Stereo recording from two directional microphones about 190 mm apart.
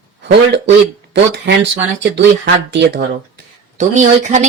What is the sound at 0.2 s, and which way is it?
Speech, 65° right (ahead or behind).